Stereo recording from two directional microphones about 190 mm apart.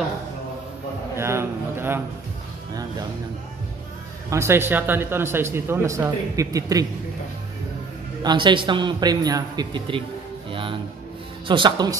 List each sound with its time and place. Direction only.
1.1 s a sound: 15° right (ahead or behind)
4.3 s speech: 15° right (ahead or behind)
8.2 s a man's voice: 25° right (ahead or behind)
10.5 s music: 25° right (ahead or behind)
11.4 s a man's voice: 25° right (ahead or behind)